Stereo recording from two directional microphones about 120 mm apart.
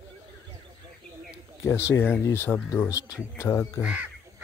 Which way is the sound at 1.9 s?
20° left (ahead or behind).